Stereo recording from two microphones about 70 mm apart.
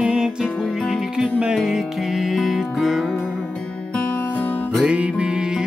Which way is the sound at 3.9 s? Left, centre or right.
Left.